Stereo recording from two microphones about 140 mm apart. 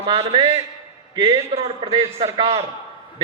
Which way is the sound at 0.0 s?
40° right (ahead or behind).